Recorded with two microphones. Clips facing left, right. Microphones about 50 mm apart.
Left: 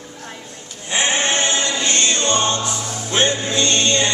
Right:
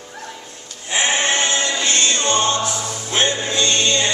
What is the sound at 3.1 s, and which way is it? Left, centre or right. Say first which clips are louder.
Music: left 1 dB; centre.